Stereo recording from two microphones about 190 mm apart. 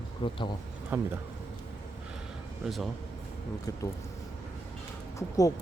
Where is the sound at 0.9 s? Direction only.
10° right (ahead or behind).